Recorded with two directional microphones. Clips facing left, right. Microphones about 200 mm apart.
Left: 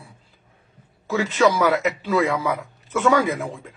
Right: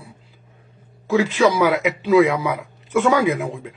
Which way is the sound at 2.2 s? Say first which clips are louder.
Right 6 dB; centre (ahead or behind).